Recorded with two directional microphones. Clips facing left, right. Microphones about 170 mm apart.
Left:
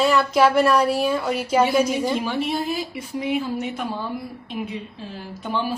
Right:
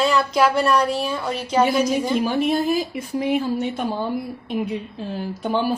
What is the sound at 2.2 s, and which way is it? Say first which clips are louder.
Speech: right 4 dB; 45° right (ahead or behind).